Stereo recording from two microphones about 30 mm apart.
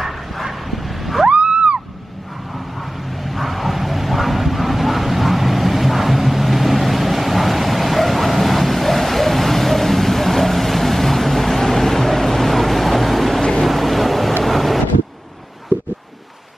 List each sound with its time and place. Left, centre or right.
0.0 s bow-wow: centre
1.3 s a sound: right
2.8 s bow-wow: centre
13.7 s boat: centre
14.4 s wind noise: centre
15.7 s a sound: right